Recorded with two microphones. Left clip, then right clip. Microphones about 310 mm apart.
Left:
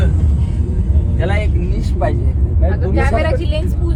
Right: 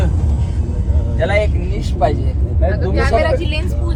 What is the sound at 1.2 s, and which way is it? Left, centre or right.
Vehicle, right.